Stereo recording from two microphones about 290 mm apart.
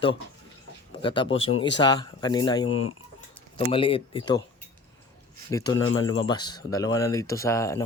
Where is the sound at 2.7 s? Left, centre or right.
Left.